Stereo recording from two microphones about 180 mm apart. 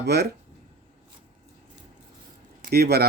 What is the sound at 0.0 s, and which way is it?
Speech, 65° right (ahead or behind).